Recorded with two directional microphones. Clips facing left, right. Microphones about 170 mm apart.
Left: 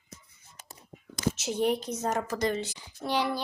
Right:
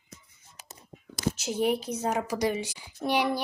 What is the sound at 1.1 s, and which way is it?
Speech, centre (ahead or behind).